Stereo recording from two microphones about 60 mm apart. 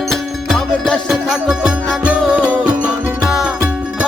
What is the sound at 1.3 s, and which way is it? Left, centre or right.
Music, centre.